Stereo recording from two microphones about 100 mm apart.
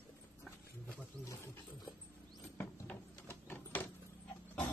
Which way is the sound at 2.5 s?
20° left (ahead or behind).